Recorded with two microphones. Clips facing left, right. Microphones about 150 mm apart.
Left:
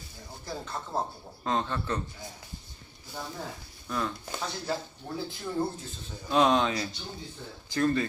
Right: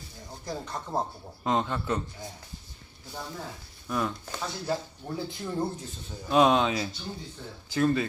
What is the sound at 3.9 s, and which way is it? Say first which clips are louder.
Speech: right 2 dB; 10° right (ahead or behind).